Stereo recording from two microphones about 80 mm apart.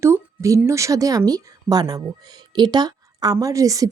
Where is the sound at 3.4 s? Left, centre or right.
Right.